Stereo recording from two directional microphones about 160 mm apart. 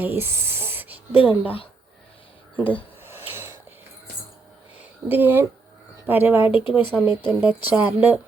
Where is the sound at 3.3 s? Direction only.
15° right (ahead or behind).